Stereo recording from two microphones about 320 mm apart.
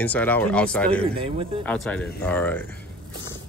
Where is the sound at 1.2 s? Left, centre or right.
Centre.